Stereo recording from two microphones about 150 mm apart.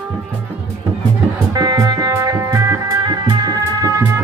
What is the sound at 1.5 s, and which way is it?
Music, 25° right (ahead or behind).